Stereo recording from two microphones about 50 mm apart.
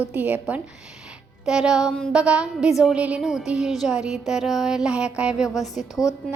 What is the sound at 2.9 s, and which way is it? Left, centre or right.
Speech, right.